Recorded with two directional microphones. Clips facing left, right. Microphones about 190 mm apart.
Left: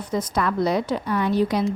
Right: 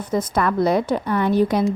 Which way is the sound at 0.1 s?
55° right (ahead or behind).